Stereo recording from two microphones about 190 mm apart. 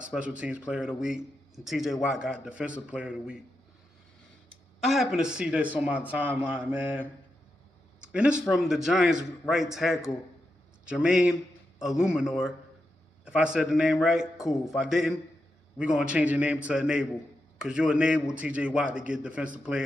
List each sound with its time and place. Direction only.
0.1 s a man's voice: 5° right (ahead or behind)
4.8 s a man's voice: centre (ahead or behind)